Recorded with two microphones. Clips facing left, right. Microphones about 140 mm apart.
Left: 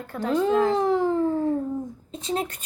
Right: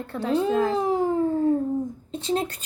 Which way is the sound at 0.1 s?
30° right (ahead or behind).